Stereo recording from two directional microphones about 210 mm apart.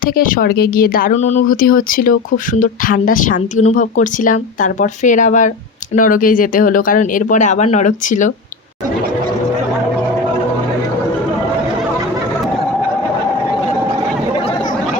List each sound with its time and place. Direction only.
0.0 s speech: 40° left (ahead or behind)